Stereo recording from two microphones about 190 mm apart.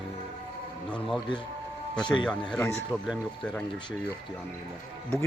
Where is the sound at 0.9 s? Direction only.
Centre (ahead or behind).